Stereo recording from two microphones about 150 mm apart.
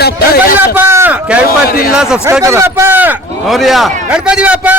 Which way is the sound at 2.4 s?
15° right (ahead or behind).